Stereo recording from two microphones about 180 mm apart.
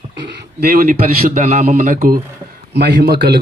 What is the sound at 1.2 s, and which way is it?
Speech, 40° right (ahead or behind).